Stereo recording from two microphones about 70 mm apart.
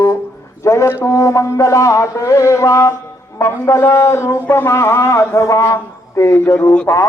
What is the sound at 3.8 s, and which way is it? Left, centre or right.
A man's voice, left.